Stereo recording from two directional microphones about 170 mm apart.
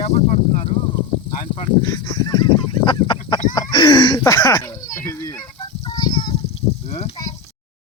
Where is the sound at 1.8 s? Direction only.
25° left (ahead or behind).